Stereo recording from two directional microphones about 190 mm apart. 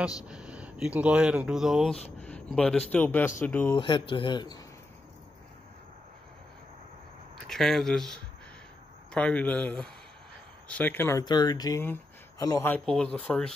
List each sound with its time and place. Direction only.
0.2 s speech: 5° right (ahead or behind)
2.0 s speech: 35° left (ahead or behind)
2.2 s a sound: 5° left (ahead or behind)
2.9 s speech: 10° left (ahead or behind)
3.7 s speech: 25° left (ahead or behind)
7.4 s speech: centre (ahead or behind)